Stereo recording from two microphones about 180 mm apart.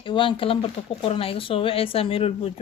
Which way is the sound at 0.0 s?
30° left (ahead or behind).